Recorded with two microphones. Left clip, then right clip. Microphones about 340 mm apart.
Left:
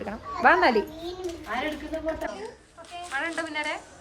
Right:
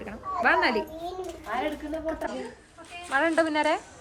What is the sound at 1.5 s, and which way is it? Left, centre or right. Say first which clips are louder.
Speech: right 1 dB; centre.